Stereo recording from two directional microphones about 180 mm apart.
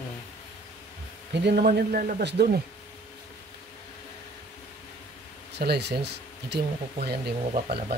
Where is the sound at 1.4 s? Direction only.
60° right (ahead or behind).